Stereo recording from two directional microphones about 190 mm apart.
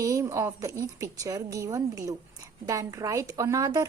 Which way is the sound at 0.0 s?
15° right (ahead or behind).